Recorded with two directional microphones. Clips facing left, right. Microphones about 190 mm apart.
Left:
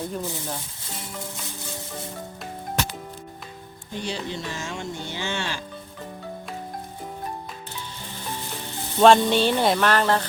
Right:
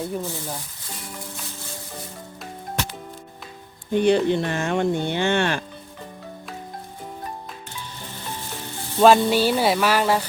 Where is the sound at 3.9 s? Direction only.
60° right (ahead or behind).